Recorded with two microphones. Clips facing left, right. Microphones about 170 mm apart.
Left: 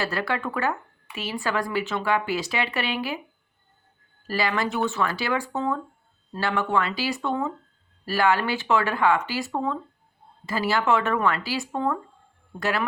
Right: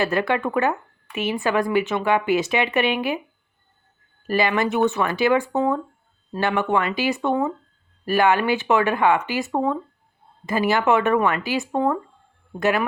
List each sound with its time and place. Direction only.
0.0 s speech: 20° right (ahead or behind)
4.3 s speech: 20° right (ahead or behind)